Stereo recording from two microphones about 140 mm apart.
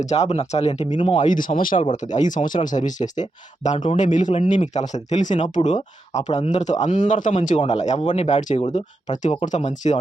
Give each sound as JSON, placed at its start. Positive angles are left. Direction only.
{"t": 0.0, "sound": "speech", "side_deg": 50}
{"t": 1.1, "sound": "a man's voice", "side_deg": 65}